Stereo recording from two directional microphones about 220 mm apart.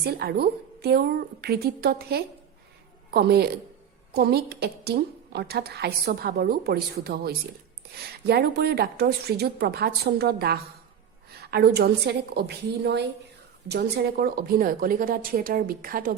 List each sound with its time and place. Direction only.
0.0 s a woman's voice: 45° right (ahead or behind)